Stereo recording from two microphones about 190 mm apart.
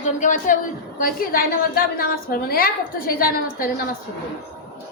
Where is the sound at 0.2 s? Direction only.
40° left (ahead or behind).